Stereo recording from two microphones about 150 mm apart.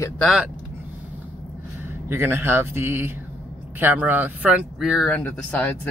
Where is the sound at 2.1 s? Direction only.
15° right (ahead or behind).